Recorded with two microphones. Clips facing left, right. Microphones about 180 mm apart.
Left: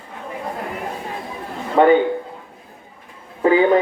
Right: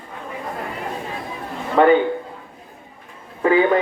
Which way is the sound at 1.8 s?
20° left (ahead or behind).